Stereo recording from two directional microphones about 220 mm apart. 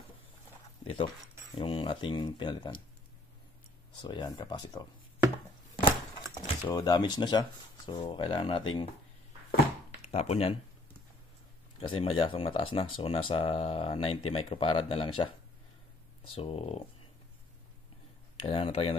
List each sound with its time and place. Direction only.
0.8 s speech: 25° left (ahead or behind)
4.0 s speech: 20° left (ahead or behind)
6.3 s speech: 20° left (ahead or behind)
10.0 s speech: 30° left (ahead or behind)
11.8 s speech: 25° left (ahead or behind)
16.3 s speech: 25° left (ahead or behind)
18.5 s speech: 25° left (ahead or behind)